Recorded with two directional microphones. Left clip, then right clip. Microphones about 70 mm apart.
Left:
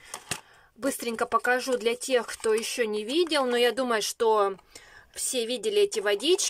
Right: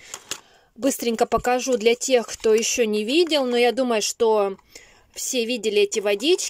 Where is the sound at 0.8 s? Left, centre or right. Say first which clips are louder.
Right 7 dB; right.